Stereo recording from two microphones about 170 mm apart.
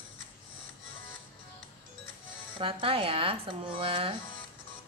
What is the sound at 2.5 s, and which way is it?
Speech, 30° right (ahead or behind).